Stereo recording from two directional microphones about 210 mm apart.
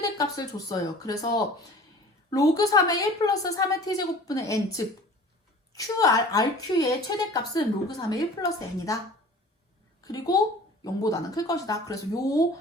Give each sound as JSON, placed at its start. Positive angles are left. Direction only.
{"t": 0.0, "sound": "a woman's voice", "side_deg": 15}
{"t": 10.0, "sound": "a woman's voice", "side_deg": 15}